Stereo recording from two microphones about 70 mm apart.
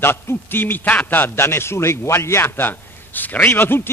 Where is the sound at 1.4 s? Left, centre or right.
Left.